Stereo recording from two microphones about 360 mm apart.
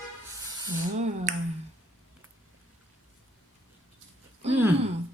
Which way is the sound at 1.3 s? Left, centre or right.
Centre.